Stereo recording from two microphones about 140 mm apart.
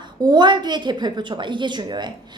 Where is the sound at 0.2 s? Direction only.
30° right (ahead or behind).